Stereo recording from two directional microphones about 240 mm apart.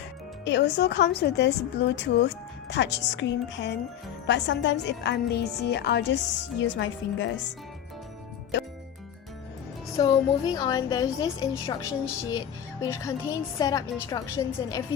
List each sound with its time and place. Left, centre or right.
0.4 s a woman's voice: left
10.0 s a woman's voice: centre